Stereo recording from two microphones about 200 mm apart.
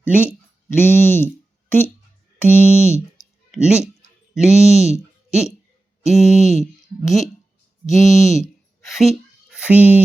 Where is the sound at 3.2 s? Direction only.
5° right (ahead or behind).